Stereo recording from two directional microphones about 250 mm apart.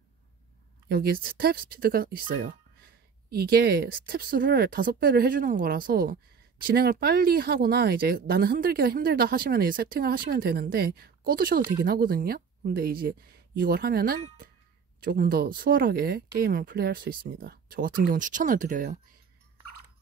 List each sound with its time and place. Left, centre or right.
0.8 s speech: right